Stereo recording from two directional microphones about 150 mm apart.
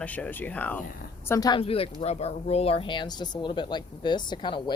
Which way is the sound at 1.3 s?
25° left (ahead or behind).